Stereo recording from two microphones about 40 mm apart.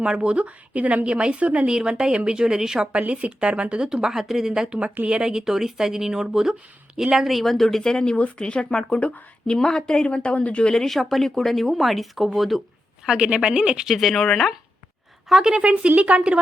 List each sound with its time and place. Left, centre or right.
0.0 s speech: right
1.0 s a woman's voice: right
1.6 s a woman's voice: centre
3.8 s speech: centre
7.1 s speech: centre; by 9.1 s left
9.5 s speech: centre
10.1 s speech: left
10.7 s speech: centre
10.9 s speech: centre
13.1 s a woman's voice: right
13.8 s speech: centre
15.3 s speech: centre
15.5 s speech: right